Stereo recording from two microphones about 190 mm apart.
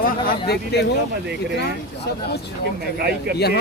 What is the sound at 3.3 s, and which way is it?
Speech, 60° left (ahead or behind).